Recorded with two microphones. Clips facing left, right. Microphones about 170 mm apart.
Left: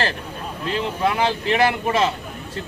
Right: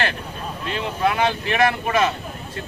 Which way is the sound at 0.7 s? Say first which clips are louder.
Even; 30° left (ahead or behind).